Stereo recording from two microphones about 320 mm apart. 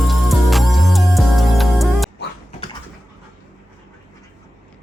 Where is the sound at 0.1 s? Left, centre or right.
Centre.